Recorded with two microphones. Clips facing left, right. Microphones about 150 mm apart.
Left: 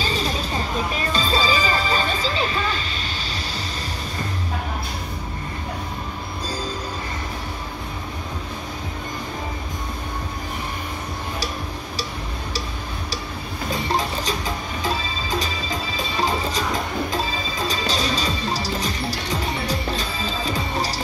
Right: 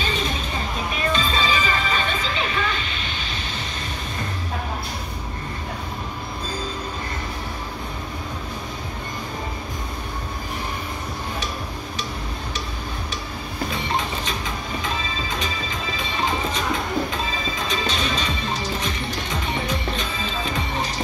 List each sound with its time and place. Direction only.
0.0 s music: 35° left (ahead or behind)
13.9 s music: 35° left (ahead or behind)
17.6 s music: 35° left (ahead or behind)